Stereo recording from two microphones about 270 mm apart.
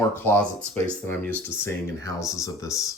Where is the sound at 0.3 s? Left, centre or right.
Centre.